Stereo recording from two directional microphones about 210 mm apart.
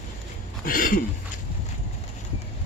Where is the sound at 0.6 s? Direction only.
40° left (ahead or behind).